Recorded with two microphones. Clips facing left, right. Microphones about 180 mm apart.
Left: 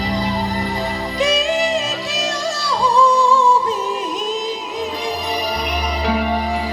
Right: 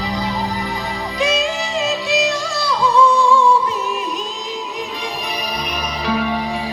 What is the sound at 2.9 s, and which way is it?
Music, 35° left (ahead or behind).